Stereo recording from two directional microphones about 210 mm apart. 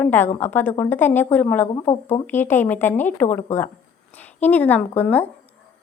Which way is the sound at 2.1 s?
10° left (ahead or behind).